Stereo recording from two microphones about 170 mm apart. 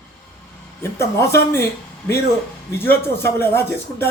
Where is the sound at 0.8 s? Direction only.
15° left (ahead or behind).